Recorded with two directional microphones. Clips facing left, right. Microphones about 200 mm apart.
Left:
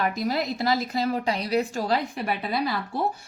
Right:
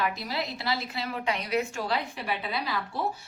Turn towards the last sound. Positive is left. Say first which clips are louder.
# left 5 dB
turn(degrees=45)  # may be behind; listen again after turning